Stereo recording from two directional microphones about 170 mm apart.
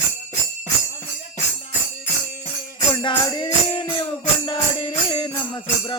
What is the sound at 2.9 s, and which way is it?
Music, 25° left (ahead or behind).